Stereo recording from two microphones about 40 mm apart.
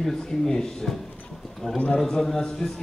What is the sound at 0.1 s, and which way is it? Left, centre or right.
A man's voice, centre.